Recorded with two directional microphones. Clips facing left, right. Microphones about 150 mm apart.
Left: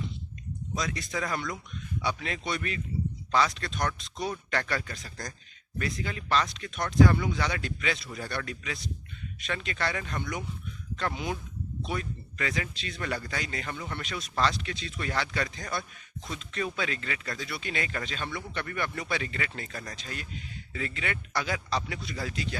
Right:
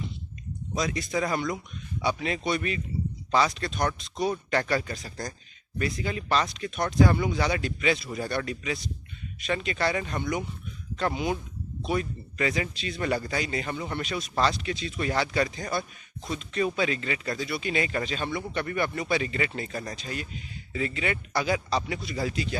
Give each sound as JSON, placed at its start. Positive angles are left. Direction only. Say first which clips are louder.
{"t": 0.7, "sound": "speech", "louder": "right 5 dB", "side_deg": -15}
{"t": 5.0, "sound": "speech", "louder": "right 5 dB", "side_deg": -30}
{"t": 5.8, "sound": "speech", "louder": "right 4 dB", "side_deg": -10}
{"t": 15.8, "sound": "speech", "louder": "right 4 dB", "side_deg": -25}
{"t": 16.6, "sound": "speech", "louder": "right 6 dB", "side_deg": -10}